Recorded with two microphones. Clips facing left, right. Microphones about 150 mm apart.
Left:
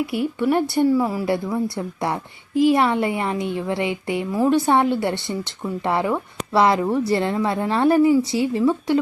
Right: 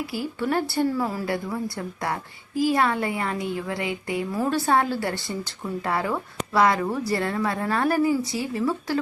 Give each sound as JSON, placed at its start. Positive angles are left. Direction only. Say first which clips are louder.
{"t": 0.1, "sound": "a woman's voice", "louder": "left 6 dB", "side_deg": 25}
{"t": 2.6, "sound": "a woman's voice", "louder": "left 5 dB", "side_deg": 25}